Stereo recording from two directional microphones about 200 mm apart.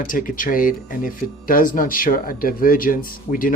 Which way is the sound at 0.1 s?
45° left (ahead or behind).